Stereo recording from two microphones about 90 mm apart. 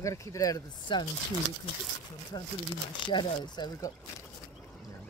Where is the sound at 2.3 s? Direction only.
55° left (ahead or behind).